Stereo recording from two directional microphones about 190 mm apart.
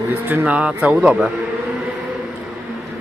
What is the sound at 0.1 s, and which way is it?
Speech, 10° right (ahead or behind).